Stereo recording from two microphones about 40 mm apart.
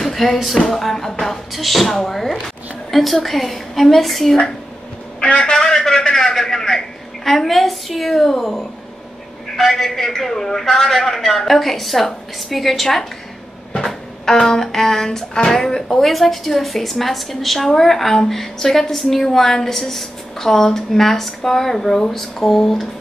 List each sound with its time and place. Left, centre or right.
0.0 s music: centre
0.7 s a woman's voice: centre
5.2 s a man's voice: left
5.6 s a woman's voice: centre
14.3 s a woman's voice: centre